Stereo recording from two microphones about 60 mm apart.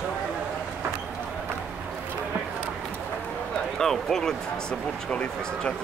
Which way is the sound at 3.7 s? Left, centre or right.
Centre.